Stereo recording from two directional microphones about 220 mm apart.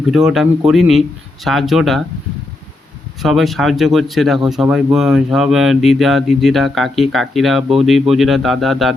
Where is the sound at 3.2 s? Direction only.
Centre (ahead or behind).